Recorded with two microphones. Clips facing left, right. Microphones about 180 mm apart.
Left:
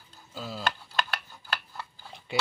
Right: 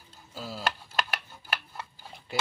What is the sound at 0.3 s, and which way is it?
Speech, 5° right (ahead or behind).